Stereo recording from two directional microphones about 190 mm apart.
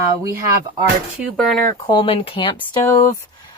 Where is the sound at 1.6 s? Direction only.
20° left (ahead or behind).